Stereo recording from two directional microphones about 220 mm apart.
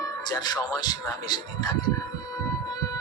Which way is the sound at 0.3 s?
20° left (ahead or behind).